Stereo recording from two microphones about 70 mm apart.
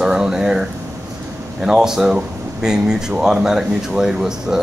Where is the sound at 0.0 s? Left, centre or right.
Centre.